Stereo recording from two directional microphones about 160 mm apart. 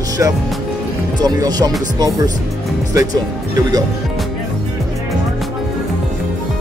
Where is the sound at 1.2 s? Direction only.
25° right (ahead or behind).